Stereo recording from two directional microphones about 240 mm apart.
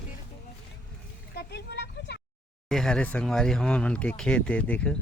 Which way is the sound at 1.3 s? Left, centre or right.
Left.